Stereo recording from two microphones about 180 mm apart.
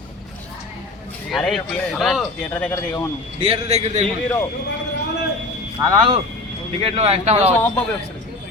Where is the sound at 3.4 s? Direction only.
35° right (ahead or behind).